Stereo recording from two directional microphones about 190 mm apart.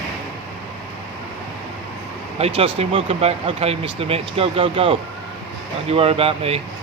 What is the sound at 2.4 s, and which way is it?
Speech, 30° right (ahead or behind).